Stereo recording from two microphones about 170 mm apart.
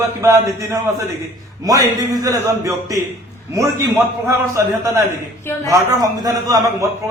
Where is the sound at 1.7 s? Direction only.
20° right (ahead or behind).